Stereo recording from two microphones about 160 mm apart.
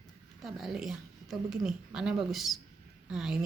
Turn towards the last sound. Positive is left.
turn(degrees=-5)  # may be behind; listen again after turning